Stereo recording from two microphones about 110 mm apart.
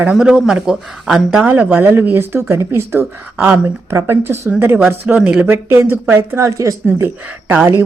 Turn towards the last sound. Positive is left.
turn(degrees=-20)  # may be behind; listen again after turning